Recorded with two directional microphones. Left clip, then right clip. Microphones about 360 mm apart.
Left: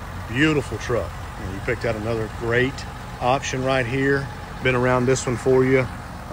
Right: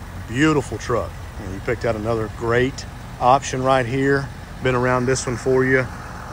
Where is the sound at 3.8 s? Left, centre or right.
Right.